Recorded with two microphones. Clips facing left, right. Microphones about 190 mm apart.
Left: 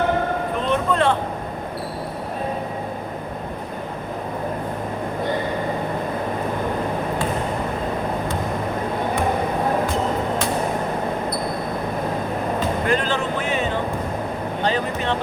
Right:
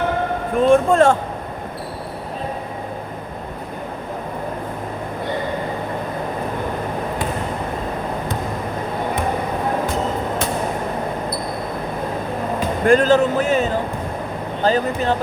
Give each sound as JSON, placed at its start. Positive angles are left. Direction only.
{"t": 0.5, "sound": "speech", "side_deg": -45}
{"t": 12.9, "sound": "a sound", "side_deg": -40}
{"t": 14.6, "sound": "vehicle", "side_deg": -40}